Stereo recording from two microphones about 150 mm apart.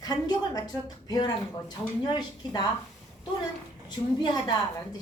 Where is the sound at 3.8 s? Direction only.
30° left (ahead or behind).